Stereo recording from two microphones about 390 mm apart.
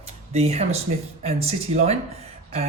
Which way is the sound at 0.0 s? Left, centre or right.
Centre.